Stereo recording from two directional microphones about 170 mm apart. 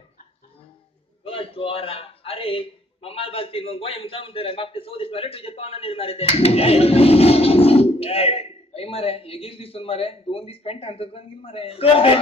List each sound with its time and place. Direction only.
1.2 s a man's voice: 35° left (ahead or behind)